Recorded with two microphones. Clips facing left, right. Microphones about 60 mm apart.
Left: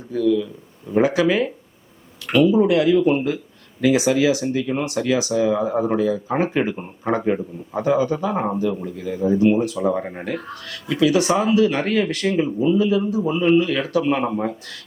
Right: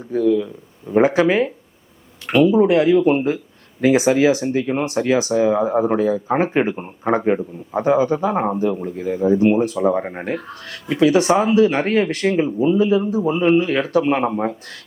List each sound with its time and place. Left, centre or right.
0.1 s a man's voice: right